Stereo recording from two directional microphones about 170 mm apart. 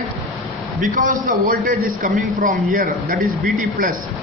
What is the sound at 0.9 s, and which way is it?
A man's voice, 50° right (ahead or behind).